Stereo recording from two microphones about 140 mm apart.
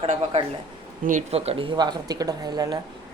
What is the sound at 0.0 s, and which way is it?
Speech, 45° right (ahead or behind).